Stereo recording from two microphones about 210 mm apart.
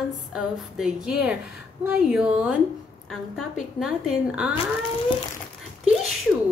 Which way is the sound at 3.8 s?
Centre (ahead or behind).